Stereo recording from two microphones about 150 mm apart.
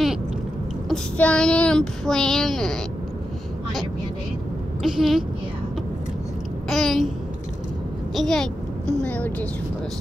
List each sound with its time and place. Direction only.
0.8 s speech: 5° left (ahead or behind)
4.8 s speech: centre (ahead or behind)
6.7 s babbling: centre (ahead or behind)
8.1 s a woman's voice: centre (ahead or behind)